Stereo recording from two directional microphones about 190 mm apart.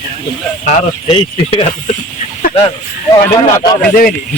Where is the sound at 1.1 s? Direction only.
30° left (ahead or behind).